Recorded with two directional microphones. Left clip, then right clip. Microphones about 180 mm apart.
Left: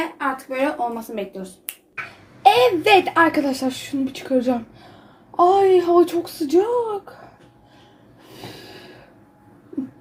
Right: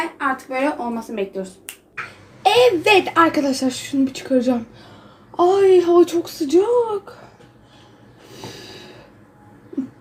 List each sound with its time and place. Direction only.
0.2 s speech: 25° left (ahead or behind)
2.4 s a woman's voice: centre (ahead or behind)
8.4 s snort: centre (ahead or behind)